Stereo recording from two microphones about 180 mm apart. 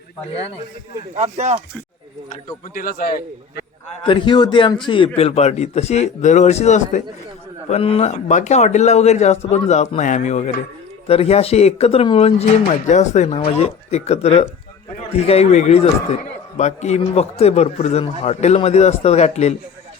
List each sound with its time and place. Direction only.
1.1 s speech: 35° right (ahead or behind)
2.7 s a man's voice: 55° left (ahead or behind)
4.0 s a man's voice: 25° left (ahead or behind)